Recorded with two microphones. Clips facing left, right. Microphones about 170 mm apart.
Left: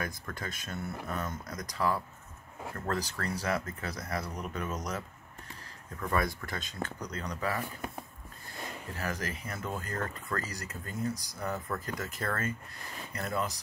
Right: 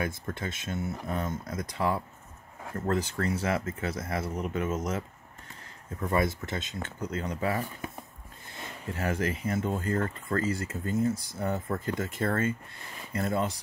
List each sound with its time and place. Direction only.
0.0 s speech: 25° right (ahead or behind)
8.9 s speech: 30° right (ahead or behind)